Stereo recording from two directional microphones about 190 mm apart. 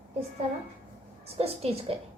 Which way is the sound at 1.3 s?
30° right (ahead or behind).